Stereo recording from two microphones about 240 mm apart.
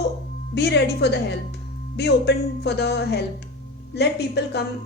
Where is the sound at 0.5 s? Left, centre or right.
Left.